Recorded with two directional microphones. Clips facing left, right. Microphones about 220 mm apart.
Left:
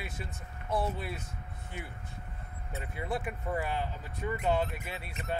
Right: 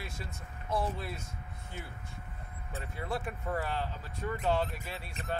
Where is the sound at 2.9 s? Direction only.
15° left (ahead or behind).